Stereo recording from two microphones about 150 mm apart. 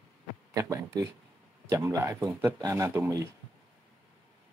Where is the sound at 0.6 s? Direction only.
20° right (ahead or behind).